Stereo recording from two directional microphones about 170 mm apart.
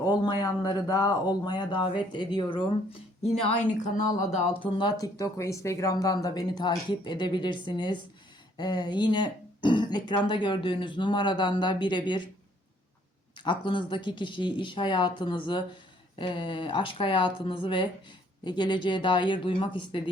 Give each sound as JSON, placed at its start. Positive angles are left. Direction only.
{"t": 0.3, "sound": "speech", "side_deg": 25}
{"t": 3.8, "sound": "speech", "side_deg": 45}
{"t": 4.8, "sound": "speech", "side_deg": 20}
{"t": 13.4, "sound": "speech", "side_deg": 30}